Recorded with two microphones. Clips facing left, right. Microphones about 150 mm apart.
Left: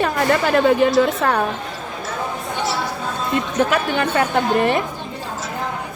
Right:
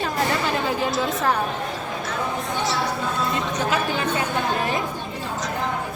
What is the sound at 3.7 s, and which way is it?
Speech, 65° left (ahead or behind).